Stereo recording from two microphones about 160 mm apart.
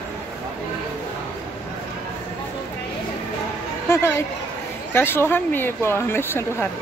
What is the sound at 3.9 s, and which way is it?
Speech, 15° left (ahead or behind).